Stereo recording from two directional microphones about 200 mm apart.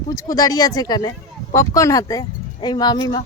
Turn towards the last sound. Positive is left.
turn(degrees=20)  # may be behind; listen again after turning